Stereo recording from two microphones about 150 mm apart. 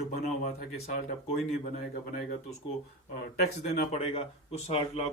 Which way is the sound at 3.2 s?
90° left.